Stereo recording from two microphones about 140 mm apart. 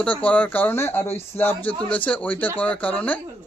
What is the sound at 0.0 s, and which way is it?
Speech, 10° left (ahead or behind).